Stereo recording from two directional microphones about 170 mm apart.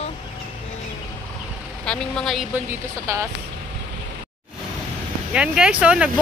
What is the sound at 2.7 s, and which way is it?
Speech, 15° right (ahead or behind).